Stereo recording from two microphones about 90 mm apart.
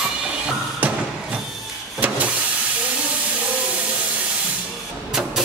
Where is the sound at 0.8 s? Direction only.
20° right (ahead or behind).